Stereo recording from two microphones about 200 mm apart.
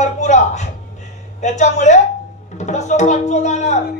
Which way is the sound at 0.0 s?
35° left (ahead or behind).